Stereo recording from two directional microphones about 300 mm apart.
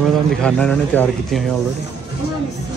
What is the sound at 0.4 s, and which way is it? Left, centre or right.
A man's voice, centre.